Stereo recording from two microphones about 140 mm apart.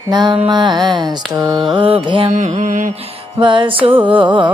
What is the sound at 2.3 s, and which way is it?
Mantra, 60° right (ahead or behind).